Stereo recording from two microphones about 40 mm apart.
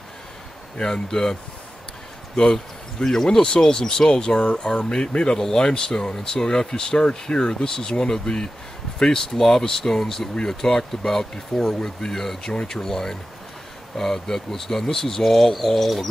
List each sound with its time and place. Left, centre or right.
0.7 s speech: left; by 16.1 s centre